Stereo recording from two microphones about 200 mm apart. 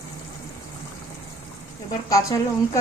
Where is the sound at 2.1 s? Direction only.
15° left (ahead or behind).